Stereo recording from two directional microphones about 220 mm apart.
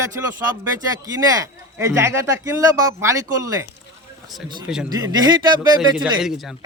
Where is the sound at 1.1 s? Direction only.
15° right (ahead or behind).